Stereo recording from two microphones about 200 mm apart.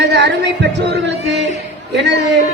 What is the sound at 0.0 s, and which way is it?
A man's voice, 60° right (ahead or behind).